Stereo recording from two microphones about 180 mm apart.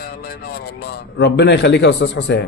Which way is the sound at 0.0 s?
60° left (ahead or behind).